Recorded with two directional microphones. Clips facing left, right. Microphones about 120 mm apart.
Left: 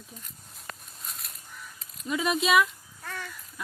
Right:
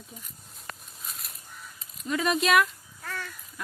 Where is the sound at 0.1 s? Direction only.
Centre (ahead or behind).